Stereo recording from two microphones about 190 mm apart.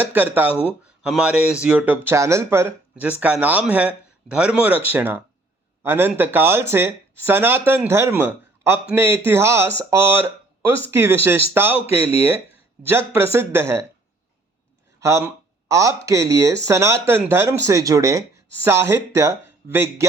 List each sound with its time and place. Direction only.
0.1 s speech: 10° right (ahead or behind)
12.9 s speech: 10° right (ahead or behind)
15.0 s speech: 15° right (ahead or behind)